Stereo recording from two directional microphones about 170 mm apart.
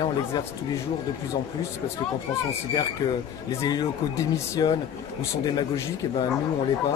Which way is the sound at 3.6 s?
20° left (ahead or behind).